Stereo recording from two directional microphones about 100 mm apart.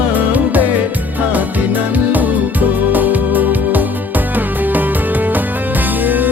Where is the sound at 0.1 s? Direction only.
15° right (ahead or behind).